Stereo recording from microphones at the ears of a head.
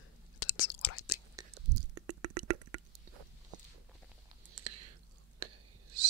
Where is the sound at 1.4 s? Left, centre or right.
Right.